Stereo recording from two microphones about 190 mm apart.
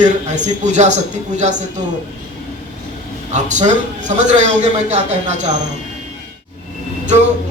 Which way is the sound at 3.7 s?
40° right (ahead or behind).